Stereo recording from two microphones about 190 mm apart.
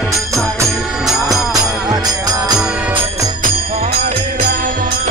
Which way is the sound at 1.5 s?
20° right (ahead or behind).